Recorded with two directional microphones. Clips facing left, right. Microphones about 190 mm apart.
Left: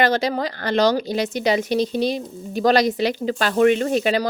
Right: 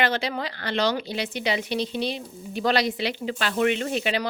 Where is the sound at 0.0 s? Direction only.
40° left (ahead or behind).